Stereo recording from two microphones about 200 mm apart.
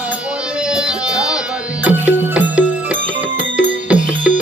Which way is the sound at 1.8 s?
5° right (ahead or behind).